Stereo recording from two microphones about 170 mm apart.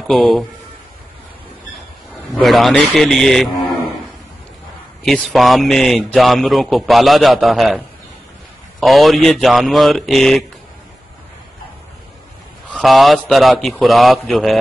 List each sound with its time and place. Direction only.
0.1 s a man's voice: centre (ahead or behind)
2.3 s a man's voice: centre (ahead or behind)
5.0 s a man's voice: centre (ahead or behind)
12.7 s a man's voice: centre (ahead or behind)